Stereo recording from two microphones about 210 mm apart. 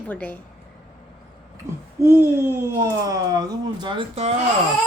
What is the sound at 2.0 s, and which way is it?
Speech, 10° right (ahead or behind).